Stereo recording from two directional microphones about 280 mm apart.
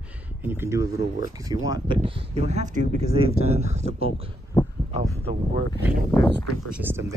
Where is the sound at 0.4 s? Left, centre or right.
Centre.